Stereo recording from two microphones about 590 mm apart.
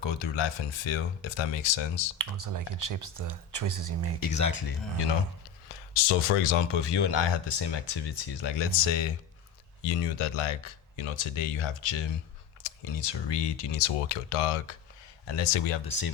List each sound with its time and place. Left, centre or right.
0.0 s speech: left
2.1 s speech: right
4.2 s speech: left
5.9 s speech: left
6.7 s speech: left
9.8 s speech: left